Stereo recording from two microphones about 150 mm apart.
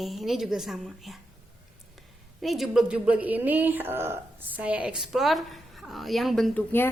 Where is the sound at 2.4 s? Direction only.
Centre (ahead or behind).